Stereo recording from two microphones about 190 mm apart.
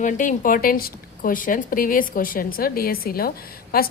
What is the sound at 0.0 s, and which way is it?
A woman's voice, 40° left (ahead or behind).